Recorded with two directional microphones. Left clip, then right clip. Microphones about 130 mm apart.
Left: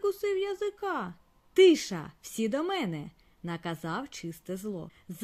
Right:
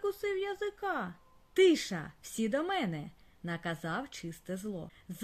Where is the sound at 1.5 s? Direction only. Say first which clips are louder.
Left 5 dB; 45° left (ahead or behind).